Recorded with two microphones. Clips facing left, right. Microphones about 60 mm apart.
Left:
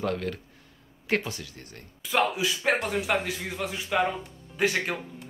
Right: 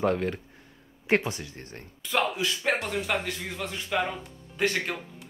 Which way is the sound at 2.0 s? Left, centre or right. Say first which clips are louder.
Left 2 dB; centre.